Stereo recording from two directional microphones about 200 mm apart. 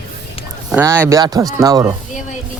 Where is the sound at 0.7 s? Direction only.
10° right (ahead or behind).